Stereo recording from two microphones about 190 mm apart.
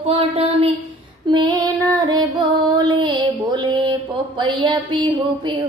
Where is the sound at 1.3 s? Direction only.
20° right (ahead or behind).